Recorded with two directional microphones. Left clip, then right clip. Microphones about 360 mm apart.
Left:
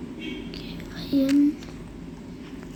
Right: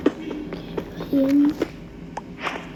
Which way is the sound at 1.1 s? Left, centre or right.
Centre.